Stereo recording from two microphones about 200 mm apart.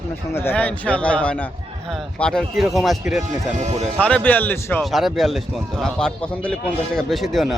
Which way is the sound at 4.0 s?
5° left (ahead or behind).